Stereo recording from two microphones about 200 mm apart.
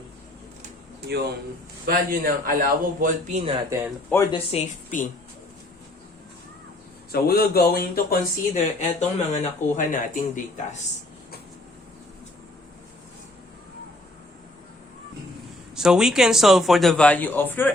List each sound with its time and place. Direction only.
1.9 s a man's voice: 45° right (ahead or behind)
4.1 s speech: 15° left (ahead or behind)
4.5 s a woman's voice: 40° left (ahead or behind)
7.1 s speech: 50° left (ahead or behind)
15.7 s speech: 5° right (ahead or behind)